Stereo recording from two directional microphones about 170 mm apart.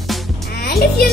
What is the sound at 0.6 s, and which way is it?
Speech, 65° left (ahead or behind).